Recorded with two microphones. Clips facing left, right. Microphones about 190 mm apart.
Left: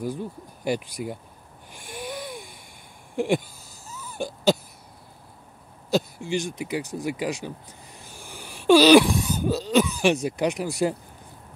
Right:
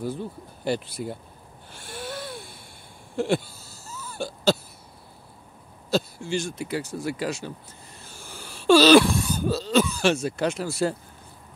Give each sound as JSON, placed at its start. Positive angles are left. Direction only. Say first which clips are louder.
{"t": 0.0, "sound": "speech", "louder": "even", "side_deg": 10}
{"t": 1.7, "sound": "wheeze", "louder": "left 1 dB", "side_deg": 15}
{"t": 3.2, "sound": "a sound", "louder": "left 1 dB", "side_deg": 15}
{"t": 5.9, "sound": "speech", "louder": "left 1 dB", "side_deg": 15}
{"t": 8.0, "sound": "throat clearing", "louder": "even", "side_deg": 15}